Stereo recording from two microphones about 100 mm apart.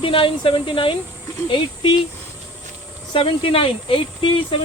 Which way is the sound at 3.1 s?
65° left (ahead or behind).